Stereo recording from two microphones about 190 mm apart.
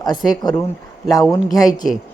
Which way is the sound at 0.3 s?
20° left (ahead or behind).